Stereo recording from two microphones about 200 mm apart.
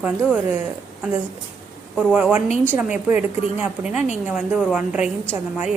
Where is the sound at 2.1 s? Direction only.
5° right (ahead or behind).